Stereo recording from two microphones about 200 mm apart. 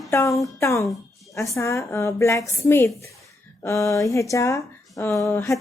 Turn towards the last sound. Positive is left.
turn(degrees=15)  # may be behind; listen again after turning